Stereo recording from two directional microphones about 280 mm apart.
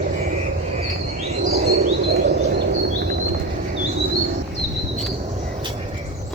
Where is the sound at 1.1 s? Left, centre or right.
Right.